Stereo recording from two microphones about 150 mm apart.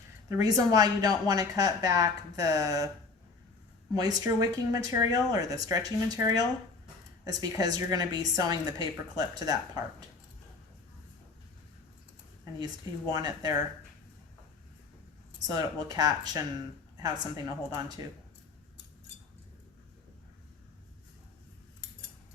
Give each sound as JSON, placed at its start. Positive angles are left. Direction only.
{"t": 0.3, "sound": "a woman's voice", "side_deg": -25}
{"t": 3.9, "sound": "a woman's voice", "side_deg": -25}
{"t": 12.5, "sound": "a woman's voice", "side_deg": -25}
{"t": 15.4, "sound": "a woman's voice", "side_deg": -25}